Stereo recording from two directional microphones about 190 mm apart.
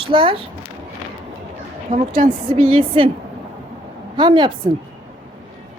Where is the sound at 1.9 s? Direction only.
45° right (ahead or behind).